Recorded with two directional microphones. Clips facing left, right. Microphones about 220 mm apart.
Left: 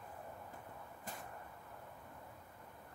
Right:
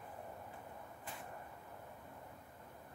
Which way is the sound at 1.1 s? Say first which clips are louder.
Left 2 dB; 40° left (ahead or behind).